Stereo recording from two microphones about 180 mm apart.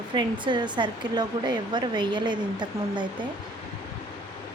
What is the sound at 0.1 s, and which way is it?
Speech, 25° right (ahead or behind).